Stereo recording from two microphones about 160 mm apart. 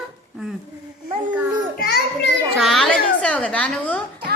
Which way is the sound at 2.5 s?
Centre (ahead or behind).